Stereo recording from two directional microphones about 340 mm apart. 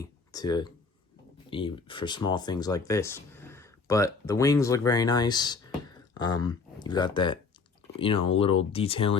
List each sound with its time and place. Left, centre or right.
0.0 s speech: centre